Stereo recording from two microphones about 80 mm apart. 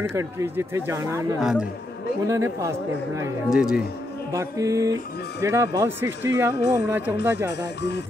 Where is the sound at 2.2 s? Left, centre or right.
Right.